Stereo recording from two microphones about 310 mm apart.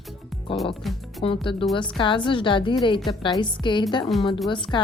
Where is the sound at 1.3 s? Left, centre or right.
Centre.